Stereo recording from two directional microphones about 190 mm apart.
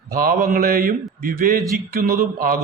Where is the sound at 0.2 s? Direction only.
50° right (ahead or behind).